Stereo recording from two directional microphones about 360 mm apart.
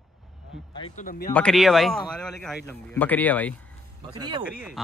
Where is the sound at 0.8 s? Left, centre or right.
Centre.